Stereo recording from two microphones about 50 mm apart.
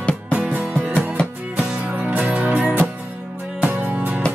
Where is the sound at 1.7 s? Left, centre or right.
Right.